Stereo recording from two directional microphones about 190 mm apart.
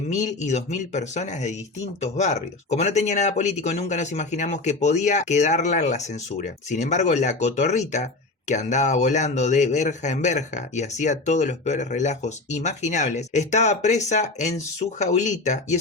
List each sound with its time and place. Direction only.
0.1 s speech: 40° left (ahead or behind)